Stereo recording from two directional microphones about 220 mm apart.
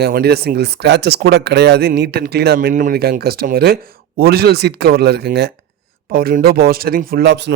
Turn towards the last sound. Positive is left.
turn(degrees=-50)  # may be behind; listen again after turning